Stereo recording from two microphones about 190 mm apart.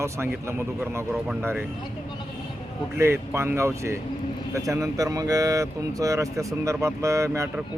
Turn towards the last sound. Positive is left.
turn(degrees=-15)  # may be behind; listen again after turning